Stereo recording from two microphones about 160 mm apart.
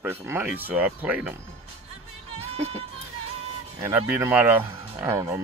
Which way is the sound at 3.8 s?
15° right (ahead or behind).